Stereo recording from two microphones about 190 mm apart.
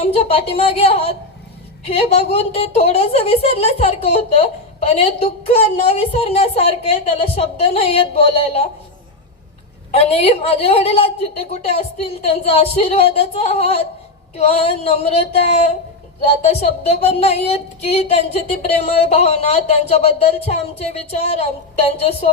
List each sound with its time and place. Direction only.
0.0 s a woman's voice: 30° left (ahead or behind)
9.9 s a woman's voice: 30° left (ahead or behind)